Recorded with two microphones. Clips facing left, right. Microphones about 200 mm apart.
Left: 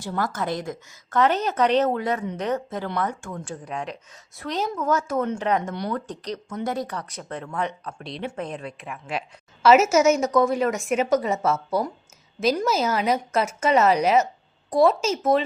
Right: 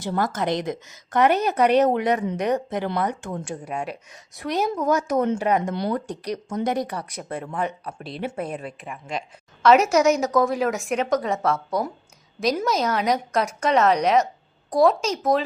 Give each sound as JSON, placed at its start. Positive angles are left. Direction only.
{"t": 0.2, "sound": "a woman's voice", "side_deg": -20}